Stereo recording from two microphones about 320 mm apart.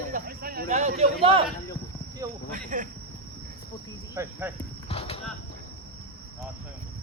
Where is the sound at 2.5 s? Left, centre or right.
Right.